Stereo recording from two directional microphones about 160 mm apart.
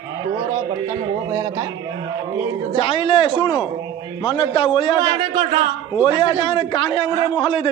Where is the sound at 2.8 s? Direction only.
35° left (ahead or behind).